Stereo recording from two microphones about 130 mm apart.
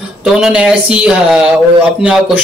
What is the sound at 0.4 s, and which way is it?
Speech, 5° right (ahead or behind).